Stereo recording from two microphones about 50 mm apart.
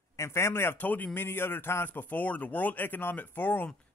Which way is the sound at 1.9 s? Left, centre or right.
Left.